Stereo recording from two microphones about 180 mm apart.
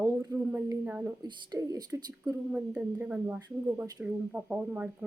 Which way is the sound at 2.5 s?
5° right (ahead or behind).